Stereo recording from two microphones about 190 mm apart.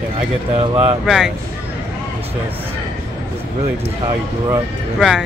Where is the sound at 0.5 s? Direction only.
30° right (ahead or behind).